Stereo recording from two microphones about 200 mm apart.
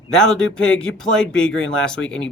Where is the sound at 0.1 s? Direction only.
5° left (ahead or behind).